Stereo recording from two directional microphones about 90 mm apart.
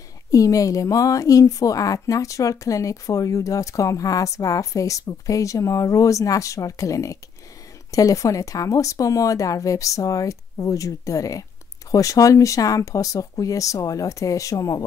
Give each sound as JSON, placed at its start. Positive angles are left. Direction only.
{"t": 0.3, "sound": "speech", "side_deg": 40}